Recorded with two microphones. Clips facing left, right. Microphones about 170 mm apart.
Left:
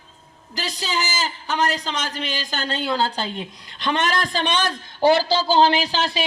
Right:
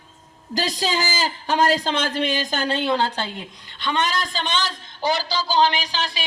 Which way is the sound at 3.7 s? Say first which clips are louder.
Left 1 dB; 50° left (ahead or behind).